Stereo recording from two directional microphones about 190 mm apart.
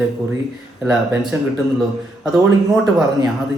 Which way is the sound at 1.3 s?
15° right (ahead or behind).